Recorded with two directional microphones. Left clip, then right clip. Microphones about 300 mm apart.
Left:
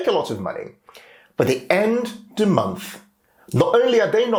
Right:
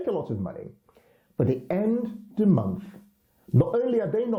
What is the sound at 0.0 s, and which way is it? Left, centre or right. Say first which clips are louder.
Speech: left 9 dB; centre.